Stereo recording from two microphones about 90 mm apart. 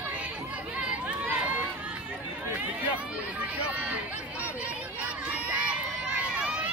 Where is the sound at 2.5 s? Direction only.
15° right (ahead or behind).